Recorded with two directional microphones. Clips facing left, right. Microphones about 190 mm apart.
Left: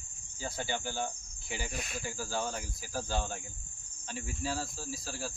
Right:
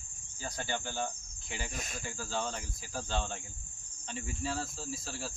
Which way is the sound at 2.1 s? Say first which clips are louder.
Even; 10° left (ahead or behind).